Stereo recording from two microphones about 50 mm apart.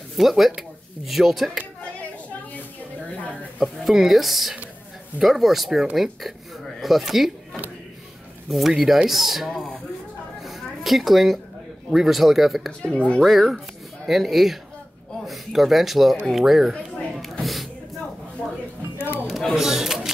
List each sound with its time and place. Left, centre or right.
0.2 s speech: centre
3.5 s speech: centre
8.5 s speech: centre
10.4 s a sound: centre
11.9 s speech: centre
12.8 s speech: left
13.2 s speech: centre
16.7 s a sound: centre
18.9 s music: left
19.2 s a sound: centre
19.5 s single-lens reflex camera: centre